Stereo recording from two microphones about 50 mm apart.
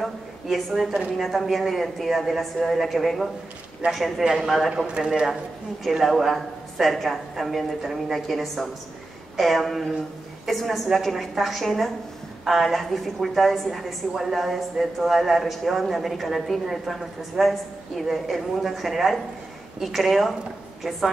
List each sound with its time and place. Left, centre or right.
0.0 s a sound: centre
1.2 s a woman's voice: centre
3.8 s a man's voice: right
4.2 s speech: centre
4.8 s speech: centre
5.9 s a woman's voice: centre